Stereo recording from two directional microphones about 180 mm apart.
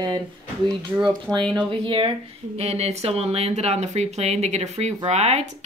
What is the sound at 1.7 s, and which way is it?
Speech, 30° right (ahead or behind).